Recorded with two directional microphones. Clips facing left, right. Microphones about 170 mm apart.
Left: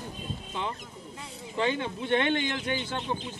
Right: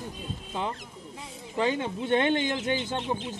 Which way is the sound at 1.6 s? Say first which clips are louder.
Right 2 dB; 40° right (ahead or behind).